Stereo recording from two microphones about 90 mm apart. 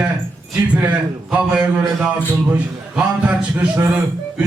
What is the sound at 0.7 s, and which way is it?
A man's voice, 15° right (ahead or behind).